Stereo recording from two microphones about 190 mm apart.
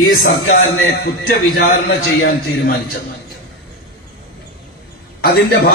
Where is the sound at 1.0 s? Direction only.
55° left (ahead or behind).